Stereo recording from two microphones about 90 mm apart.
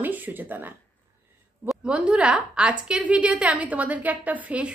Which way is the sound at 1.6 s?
10° right (ahead or behind).